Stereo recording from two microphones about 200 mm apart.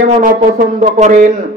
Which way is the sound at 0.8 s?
35° right (ahead or behind).